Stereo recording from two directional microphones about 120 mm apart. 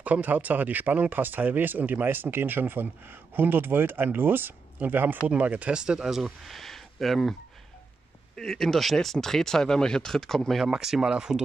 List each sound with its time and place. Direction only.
0.0 s speech: 15° right (ahead or behind)
8.4 s speech: 5° left (ahead or behind)